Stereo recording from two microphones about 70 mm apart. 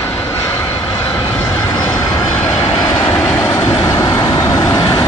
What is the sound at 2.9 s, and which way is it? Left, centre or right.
Train, left.